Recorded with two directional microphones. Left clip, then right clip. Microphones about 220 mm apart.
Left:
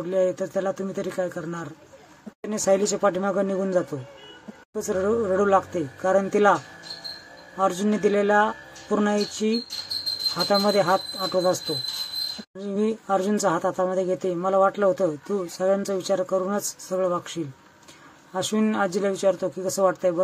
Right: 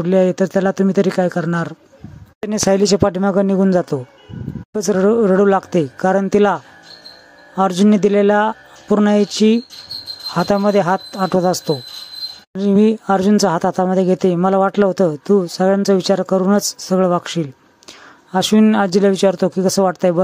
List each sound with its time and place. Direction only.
0.0 s speech: 40° right (ahead or behind)